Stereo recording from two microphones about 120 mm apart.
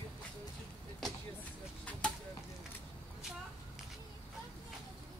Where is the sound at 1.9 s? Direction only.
10° left (ahead or behind).